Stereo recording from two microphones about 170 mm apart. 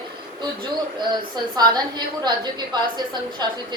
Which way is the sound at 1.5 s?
25° right (ahead or behind).